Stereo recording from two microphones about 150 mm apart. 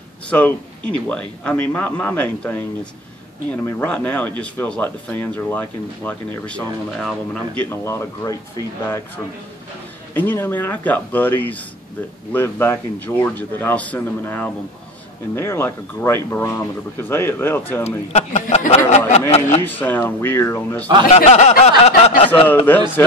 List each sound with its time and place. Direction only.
0.3 s speech: 10° left (ahead or behind)
10.1 s speech: 15° left (ahead or behind)
17.8 s a man's voice: 45° left (ahead or behind)
19.6 s speech: 10° left (ahead or behind)
21.3 s a sound: 45° left (ahead or behind)
22.7 s speech: 10° left (ahead or behind)